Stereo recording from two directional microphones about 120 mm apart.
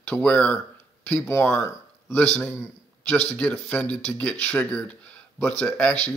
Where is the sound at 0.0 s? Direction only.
10° left (ahead or behind).